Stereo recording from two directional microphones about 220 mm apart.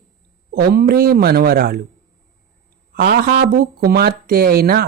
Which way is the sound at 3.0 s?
45° right (ahead or behind).